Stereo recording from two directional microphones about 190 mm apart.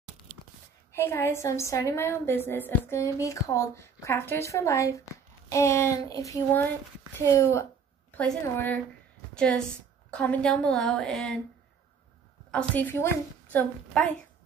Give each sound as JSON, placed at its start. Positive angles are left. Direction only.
{"t": 0.9, "sound": "a woman's voice", "side_deg": 10}
{"t": 8.2, "sound": "a woman's voice", "side_deg": 10}
{"t": 12.4, "sound": "a woman's voice", "side_deg": 5}